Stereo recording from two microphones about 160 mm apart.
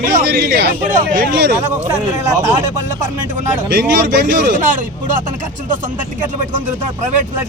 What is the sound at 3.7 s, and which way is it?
Speech, 90° right.